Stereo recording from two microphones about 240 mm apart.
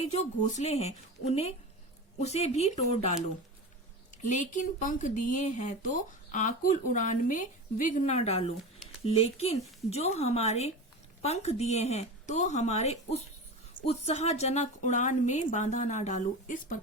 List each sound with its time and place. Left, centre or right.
0.6 s a woman's voice: left